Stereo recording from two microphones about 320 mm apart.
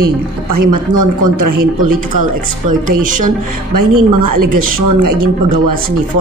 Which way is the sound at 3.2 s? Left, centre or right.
Right.